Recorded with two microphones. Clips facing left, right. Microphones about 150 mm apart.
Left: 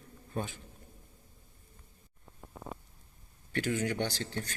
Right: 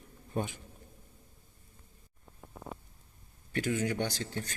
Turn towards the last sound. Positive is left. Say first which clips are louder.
# even
turn(degrees=-10)  # may be behind; listen again after turning